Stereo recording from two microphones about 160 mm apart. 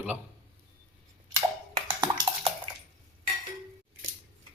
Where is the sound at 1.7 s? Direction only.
35° right (ahead or behind).